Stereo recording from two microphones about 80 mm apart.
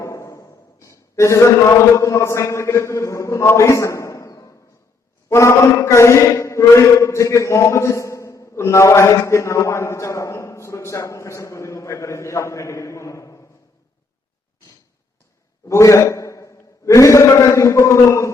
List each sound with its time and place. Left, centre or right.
0.0 s a man's voice: left
5.3 s mantra: left
15.7 s a man's voice: left